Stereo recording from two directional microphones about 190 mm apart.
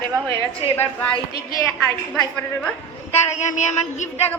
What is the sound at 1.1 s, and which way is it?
Speech, 20° left (ahead or behind).